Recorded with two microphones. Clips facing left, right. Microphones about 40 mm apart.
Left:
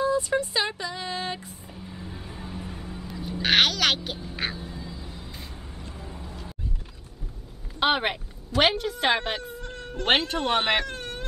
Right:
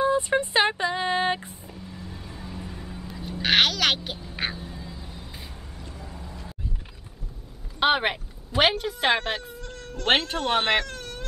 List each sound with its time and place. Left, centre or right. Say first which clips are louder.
0.0 s speech: right 2 dB; right
1.7 s vehicle: left 1 dB; centre
2.0 s a sound: left 1 dB; centre
4.4 s duck: right 2 dB; centre
5.0 s a sound: left 1 dB; centre
5.8 s vehicle: even; left
6.0 s vehicle: left 1 dB; centre
7.8 s a woman's voice: right 2 dB; centre
9.6 s cat: left 2 dB; left
10.0 s a woman's voice: even; centre
10.9 s baby cry: left 2 dB; left